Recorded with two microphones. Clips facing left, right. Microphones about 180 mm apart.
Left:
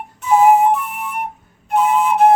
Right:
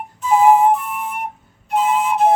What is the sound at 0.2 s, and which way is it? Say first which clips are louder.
Flute: left 1 dB; 70° left (ahead or behind).